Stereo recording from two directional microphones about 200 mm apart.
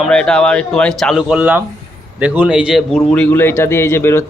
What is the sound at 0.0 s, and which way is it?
A man's voice, 5° left (ahead or behind).